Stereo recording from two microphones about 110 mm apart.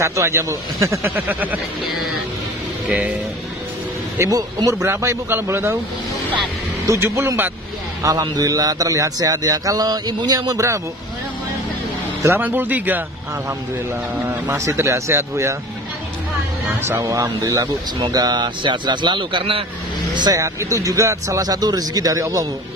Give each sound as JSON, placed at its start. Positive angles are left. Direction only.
{"t": 0.0, "sound": "speech", "side_deg": -25}
{"t": 2.9, "sound": "speech", "side_deg": -15}
{"t": 4.2, "sound": "speech", "side_deg": -35}
{"t": 4.8, "sound": "speech", "side_deg": -20}
{"t": 6.9, "sound": "speech", "side_deg": -30}
{"t": 8.0, "sound": "speech", "side_deg": -35}
{"t": 12.2, "sound": "speech", "side_deg": -20}
{"t": 14.2, "sound": "speech", "side_deg": -20}
{"t": 16.8, "sound": "speech", "side_deg": -20}
{"t": 17.2, "sound": "speech", "side_deg": -35}
{"t": 20.3, "sound": "speech", "side_deg": -30}